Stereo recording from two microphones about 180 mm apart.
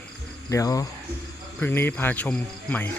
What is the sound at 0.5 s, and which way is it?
Speech, 20° left (ahead or behind).